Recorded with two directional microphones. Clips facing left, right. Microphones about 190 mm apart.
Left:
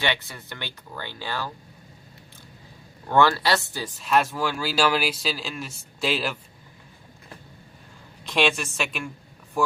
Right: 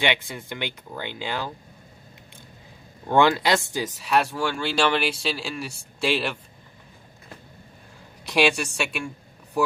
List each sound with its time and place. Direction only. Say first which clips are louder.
0.0 s speech: right 3 dB; 20° right (ahead or behind)
3.1 s speech: right 1 dB; 20° right (ahead or behind)
4.0 s speech: left 1 dB; centre (ahead or behind)
8.4 s speech: right 2 dB; centre (ahead or behind)